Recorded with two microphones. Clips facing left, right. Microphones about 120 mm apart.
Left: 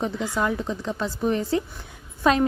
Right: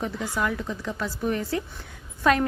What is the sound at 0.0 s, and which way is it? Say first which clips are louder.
A woman's voice: left 3 dB; 25° left (ahead or behind).